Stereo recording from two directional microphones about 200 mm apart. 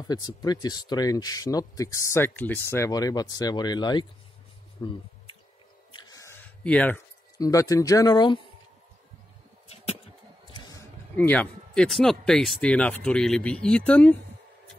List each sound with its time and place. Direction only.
0.1 s speech: 20° left (ahead or behind)
5.9 s a sound: 20° left (ahead or behind)
7.3 s speech: 15° left (ahead or behind)
11.1 s speech: 5° left (ahead or behind)